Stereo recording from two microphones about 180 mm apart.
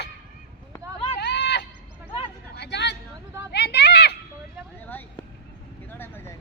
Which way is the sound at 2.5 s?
70° left (ahead or behind).